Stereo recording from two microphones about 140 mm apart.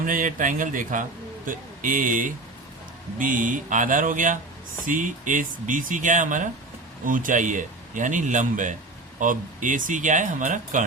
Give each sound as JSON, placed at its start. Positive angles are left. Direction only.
{"t": 0.0, "sound": "a man's voice", "side_deg": -75}